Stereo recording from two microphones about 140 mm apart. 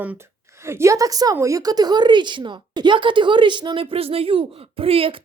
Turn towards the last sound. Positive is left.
turn(degrees=-40)  # may be behind; listen again after turning